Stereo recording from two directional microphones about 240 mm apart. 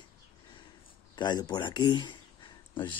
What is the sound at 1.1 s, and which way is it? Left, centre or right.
Speech, centre.